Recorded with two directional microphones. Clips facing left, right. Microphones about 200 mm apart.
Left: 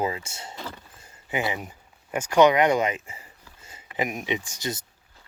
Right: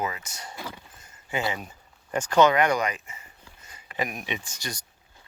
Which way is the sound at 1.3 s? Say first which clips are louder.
Left 1 dB; 20° left (ahead or behind).